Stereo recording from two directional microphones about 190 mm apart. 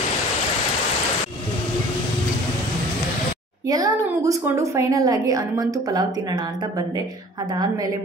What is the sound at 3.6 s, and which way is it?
A woman's voice, 20° right (ahead or behind).